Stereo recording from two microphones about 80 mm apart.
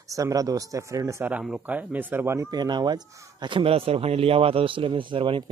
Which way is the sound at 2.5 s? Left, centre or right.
Right.